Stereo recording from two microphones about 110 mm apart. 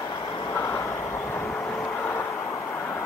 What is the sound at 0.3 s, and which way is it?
Vehicle, 30° left (ahead or behind).